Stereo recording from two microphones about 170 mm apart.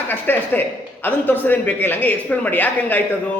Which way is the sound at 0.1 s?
10° left (ahead or behind).